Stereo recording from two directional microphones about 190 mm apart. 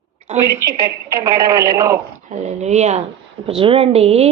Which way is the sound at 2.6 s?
35° right (ahead or behind).